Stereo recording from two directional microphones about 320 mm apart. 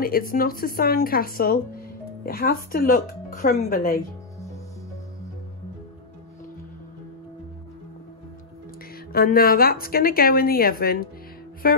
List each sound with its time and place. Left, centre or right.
0.0 s a woman's voice: left
9.1 s a woman's voice: left